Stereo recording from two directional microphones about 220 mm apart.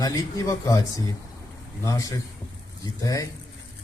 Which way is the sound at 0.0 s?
15° left (ahead or behind).